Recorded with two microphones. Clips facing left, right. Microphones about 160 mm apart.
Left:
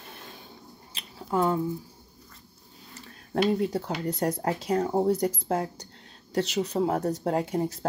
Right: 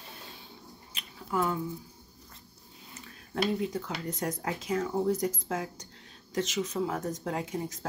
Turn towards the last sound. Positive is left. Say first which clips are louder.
# left 7 dB
turn(degrees=35)  # may be behind; listen again after turning